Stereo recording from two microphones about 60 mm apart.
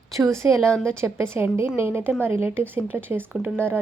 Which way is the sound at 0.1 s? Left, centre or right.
Right.